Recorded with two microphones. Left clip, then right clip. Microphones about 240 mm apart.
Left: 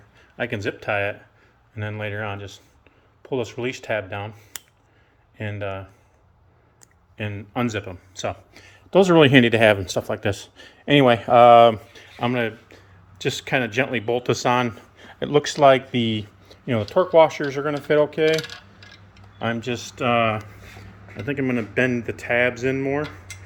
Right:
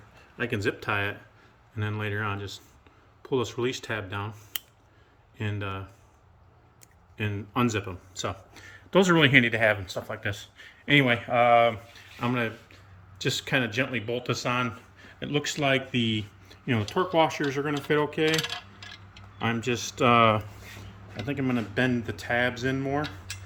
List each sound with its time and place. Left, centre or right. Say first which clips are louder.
0.3 s speech: left 2 dB; centre
5.4 s speech: left 5 dB; centre
7.2 s speech: left 1 dB; centre
9.1 s speech: left 7 dB; centre
11.9 s speech: left 5 dB; centre
19.4 s speech: left 2 dB; centre
21.5 s speech: left 5 dB; right